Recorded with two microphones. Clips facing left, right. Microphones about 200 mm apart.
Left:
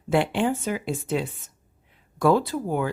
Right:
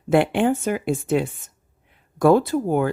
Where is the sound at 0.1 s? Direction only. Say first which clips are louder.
Right 4 dB; 55° right (ahead or behind).